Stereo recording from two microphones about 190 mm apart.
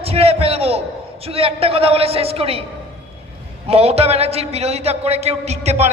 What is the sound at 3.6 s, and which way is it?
A man's voice, 30° right (ahead or behind).